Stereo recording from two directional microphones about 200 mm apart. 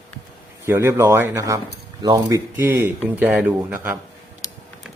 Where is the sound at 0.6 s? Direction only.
10° right (ahead or behind).